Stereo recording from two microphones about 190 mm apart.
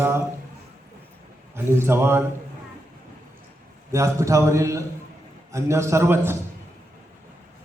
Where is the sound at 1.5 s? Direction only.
15° right (ahead or behind).